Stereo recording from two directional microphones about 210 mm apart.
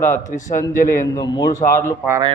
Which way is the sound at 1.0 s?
15° left (ahead or behind).